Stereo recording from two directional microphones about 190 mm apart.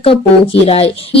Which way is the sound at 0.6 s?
30° left (ahead or behind).